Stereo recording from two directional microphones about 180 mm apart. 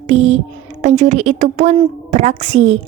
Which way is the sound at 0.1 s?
35° right (ahead or behind).